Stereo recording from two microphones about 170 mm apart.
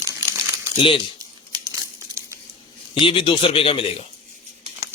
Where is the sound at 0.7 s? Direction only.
30° left (ahead or behind).